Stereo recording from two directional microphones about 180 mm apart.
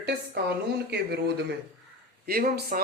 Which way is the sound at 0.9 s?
65° right (ahead or behind).